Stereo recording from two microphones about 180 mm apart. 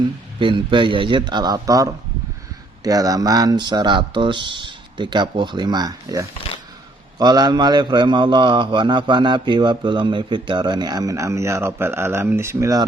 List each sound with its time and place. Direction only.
0.3 s a man's voice: 25° right (ahead or behind)